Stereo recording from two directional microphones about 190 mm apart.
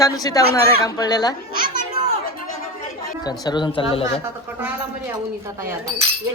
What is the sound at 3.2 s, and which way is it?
Speech, 20° left (ahead or behind).